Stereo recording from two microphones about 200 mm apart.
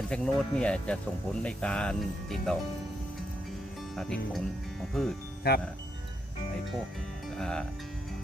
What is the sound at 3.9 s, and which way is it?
Speech, centre (ahead or behind).